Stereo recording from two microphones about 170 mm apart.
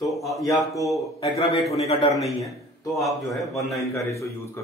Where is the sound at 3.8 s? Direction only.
20° left (ahead or behind).